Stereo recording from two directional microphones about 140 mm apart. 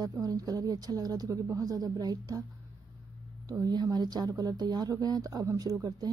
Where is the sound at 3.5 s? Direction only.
30° right (ahead or behind).